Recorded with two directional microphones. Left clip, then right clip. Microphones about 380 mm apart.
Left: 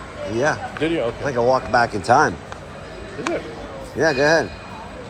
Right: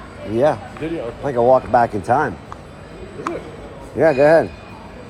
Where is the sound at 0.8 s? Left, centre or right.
Centre.